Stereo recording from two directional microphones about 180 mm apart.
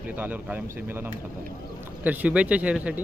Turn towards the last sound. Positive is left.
turn(degrees=-5)  # may be behind; listen again after turning